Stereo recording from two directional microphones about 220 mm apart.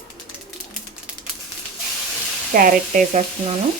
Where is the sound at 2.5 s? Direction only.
40° right (ahead or behind).